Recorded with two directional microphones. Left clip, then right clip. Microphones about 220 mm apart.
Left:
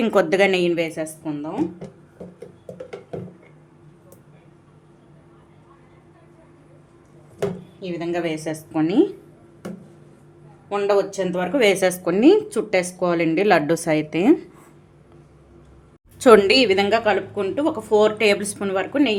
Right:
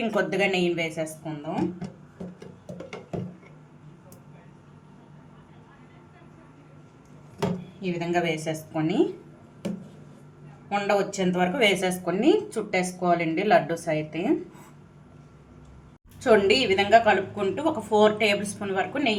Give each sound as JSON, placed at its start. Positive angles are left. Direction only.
{"t": 0.0, "sound": "a woman's voice", "side_deg": 50}
{"t": 7.9, "sound": "a woman's voice", "side_deg": 25}
{"t": 10.7, "sound": "a woman's voice", "side_deg": 25}
{"t": 16.2, "sound": "a woman's voice", "side_deg": 50}